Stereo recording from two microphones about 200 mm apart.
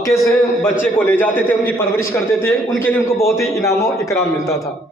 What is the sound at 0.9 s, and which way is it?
A man's voice, 10° left (ahead or behind).